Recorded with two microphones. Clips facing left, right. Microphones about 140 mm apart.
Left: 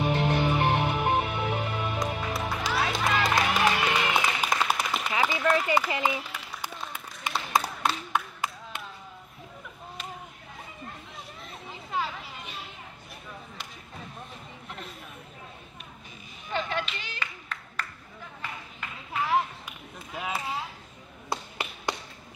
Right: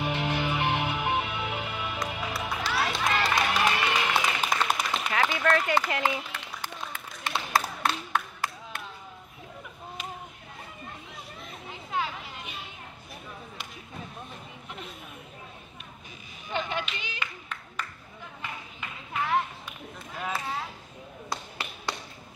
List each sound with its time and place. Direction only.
0.0 s music: centre (ahead or behind)
8.1 s clapping: 20° left (ahead or behind)
11.4 s children playing: centre (ahead or behind)
14.7 s chatter: centre (ahead or behind)
16.4 s clapping: centre (ahead or behind)
18.4 s a sound: centre (ahead or behind)
21.3 s tap: 20° left (ahead or behind)